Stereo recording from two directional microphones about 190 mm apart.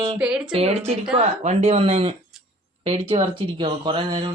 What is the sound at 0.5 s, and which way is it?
Speech, 30° right (ahead or behind).